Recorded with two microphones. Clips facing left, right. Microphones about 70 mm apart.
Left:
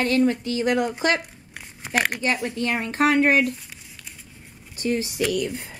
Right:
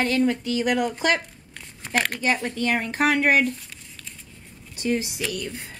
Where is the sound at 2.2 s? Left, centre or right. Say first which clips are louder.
Even; right.